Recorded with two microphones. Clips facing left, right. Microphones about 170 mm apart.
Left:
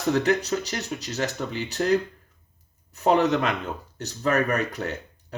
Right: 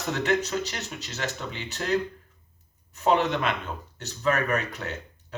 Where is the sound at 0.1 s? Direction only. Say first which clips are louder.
Left 4 dB; 35° left (ahead or behind).